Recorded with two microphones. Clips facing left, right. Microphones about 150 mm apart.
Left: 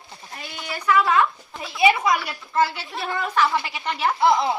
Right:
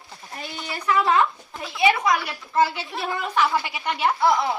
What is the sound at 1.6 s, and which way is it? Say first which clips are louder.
Speech: left 1 dB; 5° left (ahead or behind).